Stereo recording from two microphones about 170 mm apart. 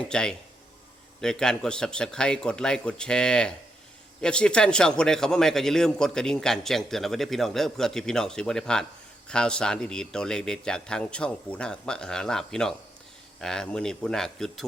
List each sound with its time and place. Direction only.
0.1 s a man's voice: 5° left (ahead or behind)